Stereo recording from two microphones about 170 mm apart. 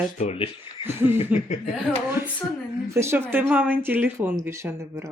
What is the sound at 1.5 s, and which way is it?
Speech, 40° left (ahead or behind).